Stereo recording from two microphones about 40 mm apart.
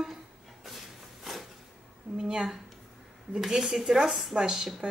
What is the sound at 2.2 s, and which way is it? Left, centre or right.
Speech, centre.